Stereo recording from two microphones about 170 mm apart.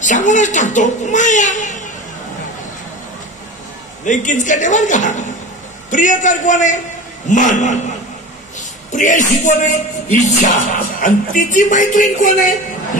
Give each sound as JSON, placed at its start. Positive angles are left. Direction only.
{"t": 0.0, "sound": "speech", "side_deg": 45}
{"t": 4.0, "sound": "speech", "side_deg": 50}